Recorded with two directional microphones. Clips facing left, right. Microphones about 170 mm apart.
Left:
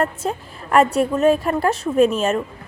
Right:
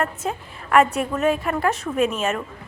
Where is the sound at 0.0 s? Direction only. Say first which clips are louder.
Left 3 dB; 35° left (ahead or behind).